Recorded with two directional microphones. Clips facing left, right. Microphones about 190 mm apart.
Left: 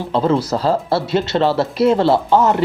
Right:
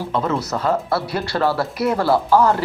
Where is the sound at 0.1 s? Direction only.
30° left (ahead or behind).